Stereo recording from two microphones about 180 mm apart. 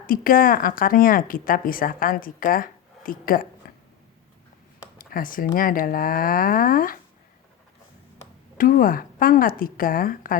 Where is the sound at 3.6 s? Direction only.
55° left (ahead or behind).